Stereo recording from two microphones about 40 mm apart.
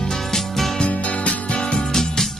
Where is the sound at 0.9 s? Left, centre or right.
Left.